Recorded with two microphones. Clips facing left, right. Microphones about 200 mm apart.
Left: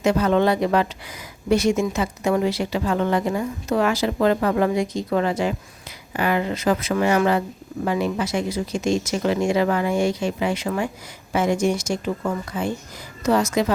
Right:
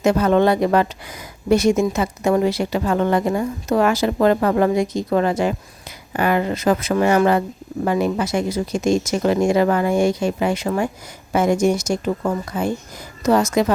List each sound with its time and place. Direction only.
0.0 s speech: 45° right (ahead or behind)